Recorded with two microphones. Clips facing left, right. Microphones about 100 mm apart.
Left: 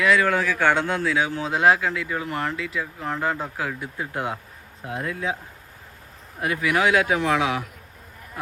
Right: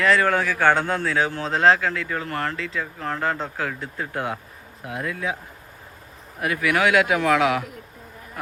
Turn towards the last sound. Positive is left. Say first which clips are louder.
# right 3 dB
turn(degrees=20)  # may be behind; listen again after turning